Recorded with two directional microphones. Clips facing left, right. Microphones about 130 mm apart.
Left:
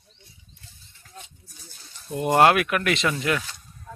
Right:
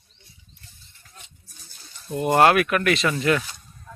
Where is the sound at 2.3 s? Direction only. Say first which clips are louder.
Right 1 dB; 20° left (ahead or behind).